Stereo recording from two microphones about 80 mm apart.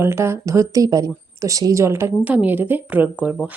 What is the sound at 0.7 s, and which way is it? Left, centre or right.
A woman's voice, right.